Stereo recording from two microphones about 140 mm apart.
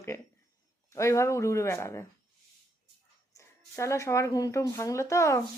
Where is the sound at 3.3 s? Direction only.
20° left (ahead or behind).